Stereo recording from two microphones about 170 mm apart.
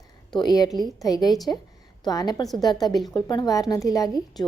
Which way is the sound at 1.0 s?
20° left (ahead or behind).